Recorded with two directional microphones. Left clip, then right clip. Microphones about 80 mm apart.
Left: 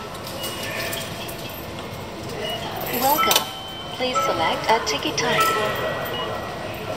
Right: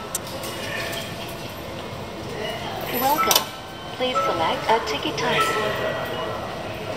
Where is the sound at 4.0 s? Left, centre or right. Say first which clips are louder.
Even; left.